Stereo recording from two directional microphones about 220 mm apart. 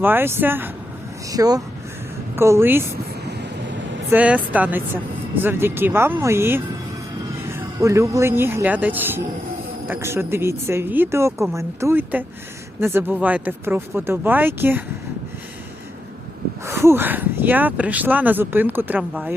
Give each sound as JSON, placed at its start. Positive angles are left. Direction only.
{"t": 0.0, "sound": "speech", "side_deg": -10}
{"t": 4.1, "sound": "speech", "side_deg": -5}
{"t": 7.8, "sound": "speech", "side_deg": -15}
{"t": 16.6, "sound": "speech", "side_deg": -10}